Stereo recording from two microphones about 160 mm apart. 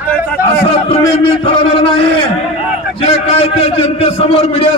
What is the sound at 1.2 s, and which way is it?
A man's voice, 35° left (ahead or behind).